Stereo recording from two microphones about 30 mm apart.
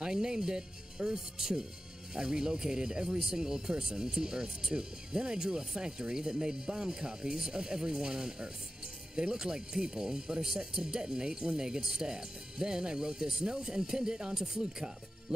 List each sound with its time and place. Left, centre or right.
0.0 s speech: right